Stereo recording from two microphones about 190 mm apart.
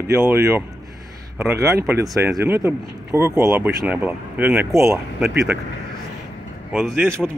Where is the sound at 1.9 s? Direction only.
10° right (ahead or behind).